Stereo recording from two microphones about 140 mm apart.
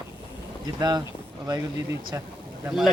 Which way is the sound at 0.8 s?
30° right (ahead or behind).